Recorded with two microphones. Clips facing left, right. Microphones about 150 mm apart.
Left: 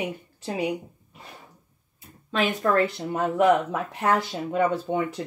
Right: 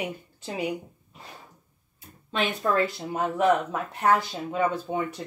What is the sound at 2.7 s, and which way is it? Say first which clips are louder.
Speech: left 2 dB; 60° left (ahead or behind).